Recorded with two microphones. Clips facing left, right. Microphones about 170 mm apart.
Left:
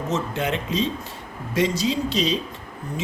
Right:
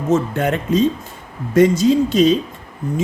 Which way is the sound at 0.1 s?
50° right (ahead or behind).